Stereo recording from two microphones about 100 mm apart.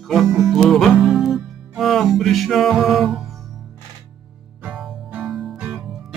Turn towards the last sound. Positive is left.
turn(degrees=-5)  # may be behind; listen again after turning